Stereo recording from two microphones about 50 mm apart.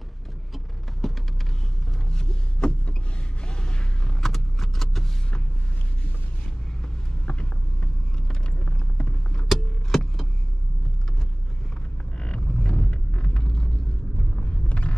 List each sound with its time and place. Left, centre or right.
1.0 s a sound: centre
3.4 s vehicle: centre
7.2 s vehicle: left
9.5 s vehicle: centre
12.2 s vehicle: centre
14.4 s a sound: left